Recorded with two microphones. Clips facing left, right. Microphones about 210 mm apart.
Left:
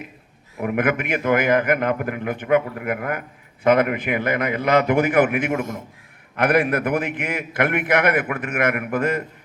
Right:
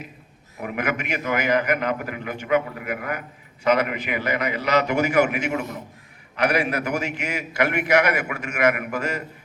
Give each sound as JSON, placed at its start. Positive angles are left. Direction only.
{"t": 0.6, "sound": "a man's voice", "side_deg": 50}